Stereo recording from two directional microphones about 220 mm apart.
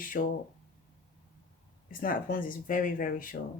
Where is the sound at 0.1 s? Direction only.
45° left (ahead or behind).